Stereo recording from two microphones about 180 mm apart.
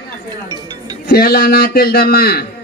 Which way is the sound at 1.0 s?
60° left (ahead or behind).